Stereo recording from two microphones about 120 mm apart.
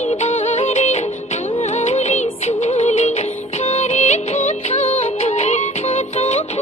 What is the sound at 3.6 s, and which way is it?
Music of bollywood, 70° left (ahead or behind).